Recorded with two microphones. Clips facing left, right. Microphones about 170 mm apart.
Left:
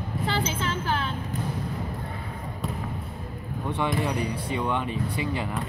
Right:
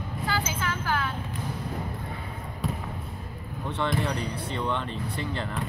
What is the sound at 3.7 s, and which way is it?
Speech, 10° left (ahead or behind).